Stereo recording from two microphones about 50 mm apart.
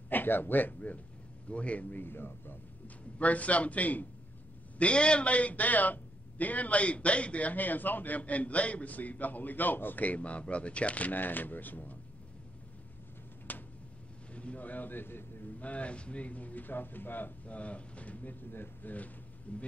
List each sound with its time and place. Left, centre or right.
0.1 s a man's voice: left
3.2 s a man's voice: left
4.7 s a man's voice: left
13.5 s a sound: left
14.3 s a man's voice: left
15.6 s a man's voice: left
17.6 s a man's voice: left